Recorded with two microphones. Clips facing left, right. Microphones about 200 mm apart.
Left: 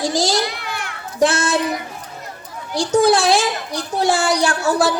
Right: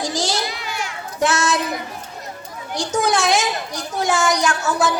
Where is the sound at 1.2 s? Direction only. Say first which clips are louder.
Left 3 dB; 30° left (ahead or behind).